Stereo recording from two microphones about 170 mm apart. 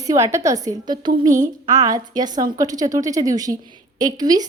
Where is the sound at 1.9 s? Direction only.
25° right (ahead or behind).